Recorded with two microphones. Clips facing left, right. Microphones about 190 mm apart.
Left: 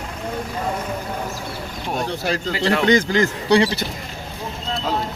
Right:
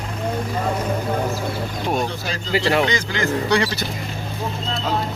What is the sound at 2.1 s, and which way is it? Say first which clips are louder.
Speech: left 5 dB; 65° left (ahead or behind).